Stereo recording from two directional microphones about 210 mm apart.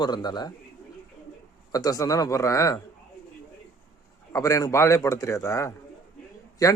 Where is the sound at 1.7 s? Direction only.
15° left (ahead or behind).